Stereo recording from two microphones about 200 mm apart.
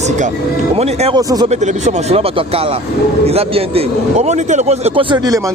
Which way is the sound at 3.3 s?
30° right (ahead or behind).